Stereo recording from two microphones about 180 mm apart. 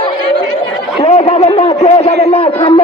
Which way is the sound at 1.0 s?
35° left (ahead or behind).